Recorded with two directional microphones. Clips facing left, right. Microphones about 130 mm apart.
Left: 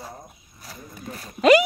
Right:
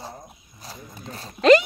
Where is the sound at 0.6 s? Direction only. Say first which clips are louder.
Even; 25° right (ahead or behind).